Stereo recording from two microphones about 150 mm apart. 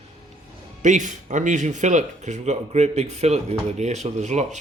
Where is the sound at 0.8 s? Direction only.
55° right (ahead or behind).